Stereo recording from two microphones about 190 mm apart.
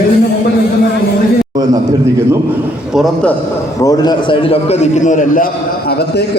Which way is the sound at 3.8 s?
20° left (ahead or behind).